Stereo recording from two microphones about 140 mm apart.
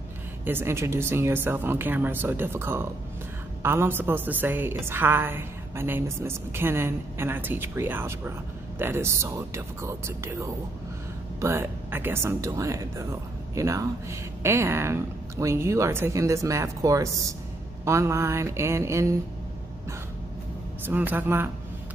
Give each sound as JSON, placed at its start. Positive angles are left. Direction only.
{"t": 0.5, "sound": "a woman's voice", "side_deg": -15}
{"t": 20.8, "sound": "a woman's voice", "side_deg": -10}